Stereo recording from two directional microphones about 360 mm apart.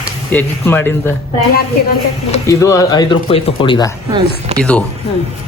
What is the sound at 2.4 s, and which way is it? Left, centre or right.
Speech, centre.